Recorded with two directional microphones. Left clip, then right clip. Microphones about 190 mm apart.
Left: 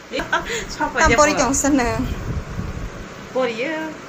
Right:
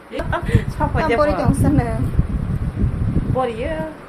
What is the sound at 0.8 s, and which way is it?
Speech, 55° right (ahead or behind).